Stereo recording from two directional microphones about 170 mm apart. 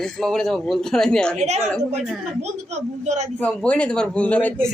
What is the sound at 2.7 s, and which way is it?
Speech, 40° right (ahead or behind).